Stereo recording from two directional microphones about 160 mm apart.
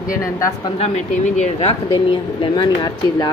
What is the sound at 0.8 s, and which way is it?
Speech, 40° left (ahead or behind).